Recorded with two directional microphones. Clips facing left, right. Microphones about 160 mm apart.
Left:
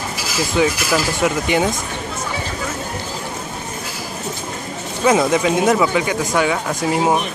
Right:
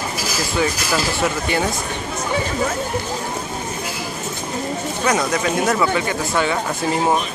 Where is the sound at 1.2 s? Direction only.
15° left (ahead or behind).